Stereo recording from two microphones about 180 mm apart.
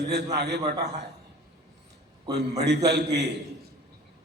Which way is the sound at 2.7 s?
70° right (ahead or behind).